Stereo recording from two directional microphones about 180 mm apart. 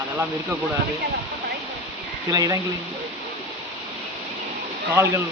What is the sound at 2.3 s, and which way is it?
Speech, 20° right (ahead or behind).